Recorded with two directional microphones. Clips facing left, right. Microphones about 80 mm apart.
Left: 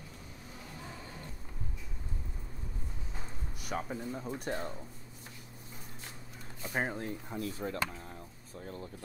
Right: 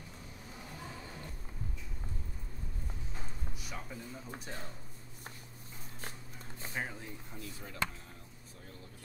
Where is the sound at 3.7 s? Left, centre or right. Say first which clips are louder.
Left 9 dB; left.